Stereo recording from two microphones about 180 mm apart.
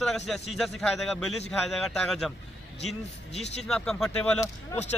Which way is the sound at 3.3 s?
35° left (ahead or behind).